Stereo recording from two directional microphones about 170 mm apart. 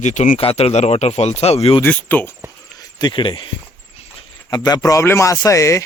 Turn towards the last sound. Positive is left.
turn(degrees=20)  # may be behind; listen again after turning